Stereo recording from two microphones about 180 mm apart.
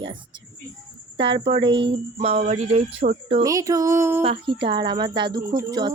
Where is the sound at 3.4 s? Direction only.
20° right (ahead or behind).